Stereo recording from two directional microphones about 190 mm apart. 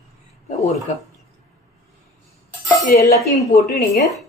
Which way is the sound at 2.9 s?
50° left (ahead or behind).